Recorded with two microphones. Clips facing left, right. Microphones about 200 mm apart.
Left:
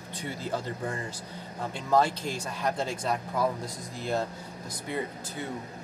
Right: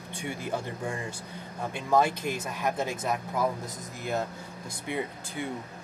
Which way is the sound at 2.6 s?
10° right (ahead or behind).